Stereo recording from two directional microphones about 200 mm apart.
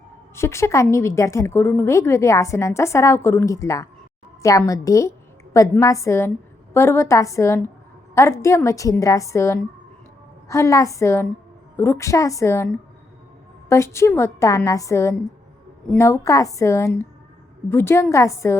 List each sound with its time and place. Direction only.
0.3 s a woman's voice: 15° left (ahead or behind)
13.7 s a woman's voice: 15° left (ahead or behind)